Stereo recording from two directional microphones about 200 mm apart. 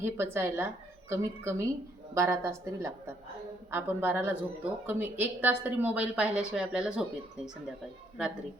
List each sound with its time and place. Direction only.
0.0 s speech: 10° right (ahead or behind)